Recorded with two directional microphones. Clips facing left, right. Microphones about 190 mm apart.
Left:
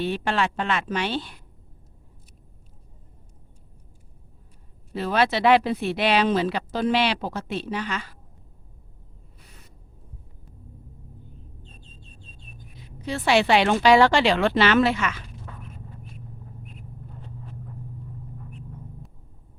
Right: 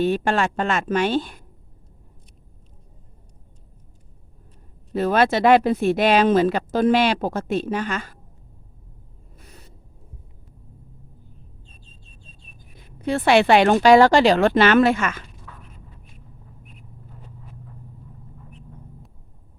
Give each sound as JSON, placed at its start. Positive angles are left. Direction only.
{"t": 0.0, "sound": "speech", "side_deg": -45}
{"t": 4.9, "sound": "speech", "side_deg": -50}
{"t": 12.7, "sound": "speech", "side_deg": -55}